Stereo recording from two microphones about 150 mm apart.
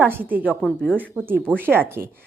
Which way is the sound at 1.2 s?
15° right (ahead or behind).